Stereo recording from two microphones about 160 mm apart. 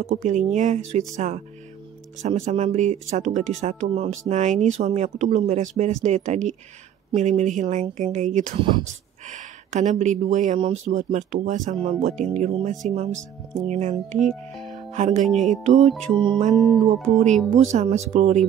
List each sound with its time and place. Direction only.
0.1 s speech: 50° right (ahead or behind)
8.5 s speech: 30° right (ahead or behind)
9.3 s speech: 50° right (ahead or behind)
12.9 s music: 40° right (ahead or behind)
13.7 s speech: 50° right (ahead or behind)
14.1 s speech: centre (ahead or behind)
14.7 s music: 45° right (ahead or behind)
15.2 s speech: centre (ahead or behind)
15.5 s speech: 45° right (ahead or behind)
16.1 s music: 30° right (ahead or behind)
16.5 s speech: centre (ahead or behind)
17.6 s speech: 45° right (ahead or behind)